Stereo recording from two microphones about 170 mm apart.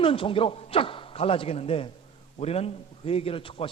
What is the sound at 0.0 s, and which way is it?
A man's voice, 30° left (ahead or behind).